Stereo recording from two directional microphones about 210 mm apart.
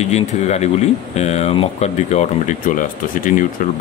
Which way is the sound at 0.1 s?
30° left (ahead or behind).